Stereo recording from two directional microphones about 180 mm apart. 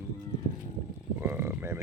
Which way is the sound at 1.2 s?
15° right (ahead or behind).